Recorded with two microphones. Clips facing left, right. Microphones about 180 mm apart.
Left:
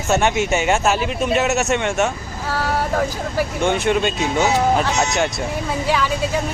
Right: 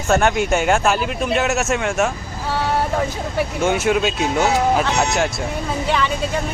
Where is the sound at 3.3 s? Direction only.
5° right (ahead or behind).